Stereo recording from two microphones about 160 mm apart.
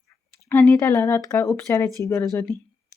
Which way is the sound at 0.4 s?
15° left (ahead or behind).